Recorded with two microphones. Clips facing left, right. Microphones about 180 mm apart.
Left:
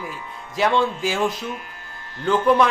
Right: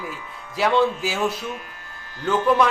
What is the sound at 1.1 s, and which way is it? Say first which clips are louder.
Speech: left 2 dB; 20° left (ahead or behind).